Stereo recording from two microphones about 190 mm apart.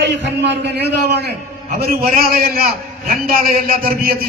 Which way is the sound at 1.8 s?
50° right (ahead or behind).